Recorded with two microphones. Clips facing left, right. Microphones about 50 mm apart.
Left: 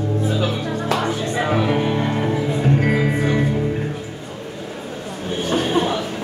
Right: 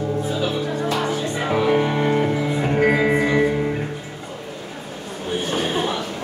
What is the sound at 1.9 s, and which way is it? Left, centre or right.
Music, centre.